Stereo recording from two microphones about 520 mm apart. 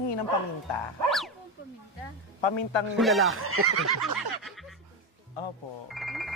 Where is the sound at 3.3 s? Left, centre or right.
Right.